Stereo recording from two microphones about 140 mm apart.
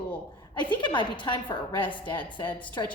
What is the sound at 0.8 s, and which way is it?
A woman's voice, 35° left (ahead or behind).